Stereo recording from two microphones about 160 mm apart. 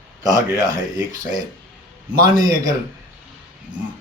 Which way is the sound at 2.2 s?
25° right (ahead or behind).